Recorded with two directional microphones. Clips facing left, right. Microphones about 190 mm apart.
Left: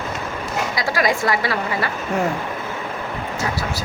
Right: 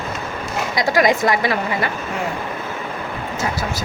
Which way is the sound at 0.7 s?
20° right (ahead or behind).